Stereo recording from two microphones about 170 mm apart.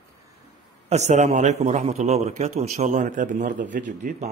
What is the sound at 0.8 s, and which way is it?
A man's voice, 40° right (ahead or behind).